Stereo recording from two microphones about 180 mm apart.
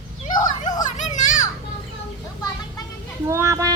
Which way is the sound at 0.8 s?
45° left (ahead or behind).